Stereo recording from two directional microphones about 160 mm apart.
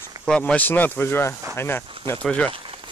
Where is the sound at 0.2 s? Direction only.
5° left (ahead or behind).